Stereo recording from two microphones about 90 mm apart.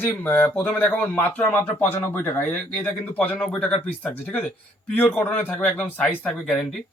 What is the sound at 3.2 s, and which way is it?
A man's voice, 15° left (ahead or behind).